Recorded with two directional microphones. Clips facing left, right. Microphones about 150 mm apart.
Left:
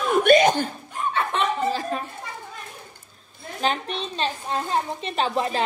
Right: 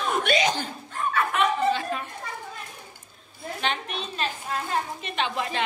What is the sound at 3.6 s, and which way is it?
A woman's voice, 35° left (ahead or behind).